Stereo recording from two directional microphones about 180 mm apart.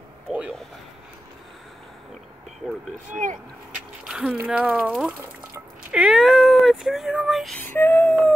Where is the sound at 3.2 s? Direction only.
45° right (ahead or behind).